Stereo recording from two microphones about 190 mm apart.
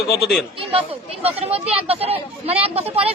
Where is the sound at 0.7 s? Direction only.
30° right (ahead or behind).